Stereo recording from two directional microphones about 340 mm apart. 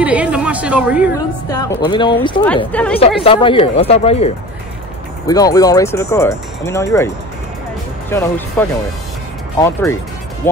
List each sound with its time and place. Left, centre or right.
0.0 s chatter: centre
1.5 s speech: centre
3.3 s speech: centre
8.1 s speech: centre